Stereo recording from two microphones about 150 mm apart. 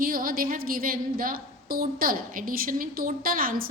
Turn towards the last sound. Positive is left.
turn(degrees=-75)  # may be behind; listen again after turning